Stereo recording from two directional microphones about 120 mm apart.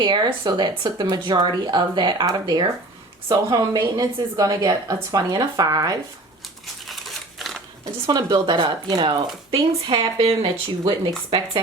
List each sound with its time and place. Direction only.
0.0 s a woman's voice: 40° right (ahead or behind)
6.8 s crumpling: centre (ahead or behind)
8.0 s a woman's voice: 35° right (ahead or behind)